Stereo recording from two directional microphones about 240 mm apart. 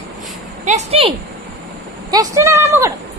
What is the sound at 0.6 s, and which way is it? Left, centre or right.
Speech, right.